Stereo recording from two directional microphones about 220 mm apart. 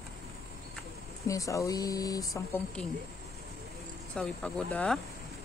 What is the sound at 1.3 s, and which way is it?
Speech, 15° left (ahead or behind).